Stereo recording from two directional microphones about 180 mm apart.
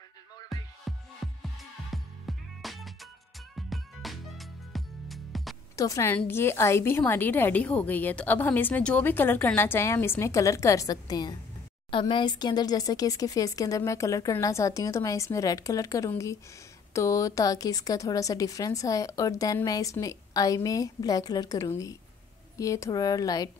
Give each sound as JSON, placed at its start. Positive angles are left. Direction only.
{"t": 0.5, "sound": "music", "side_deg": 0}
{"t": 5.8, "sound": "a woman's voice", "side_deg": 15}